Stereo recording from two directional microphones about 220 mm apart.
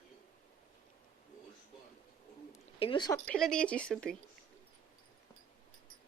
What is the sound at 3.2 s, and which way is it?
Speech, 5° left (ahead or behind).